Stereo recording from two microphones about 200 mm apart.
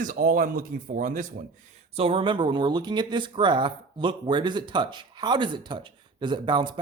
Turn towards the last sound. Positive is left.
turn(degrees=-25)  # may be behind; listen again after turning